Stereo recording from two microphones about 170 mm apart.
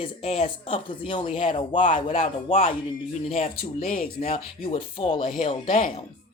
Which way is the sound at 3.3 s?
50° left (ahead or behind).